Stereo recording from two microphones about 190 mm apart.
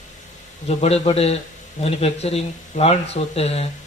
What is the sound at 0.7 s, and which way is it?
Speech, 35° left (ahead or behind).